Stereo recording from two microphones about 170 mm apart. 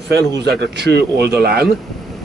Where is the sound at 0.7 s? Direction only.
75° right (ahead or behind).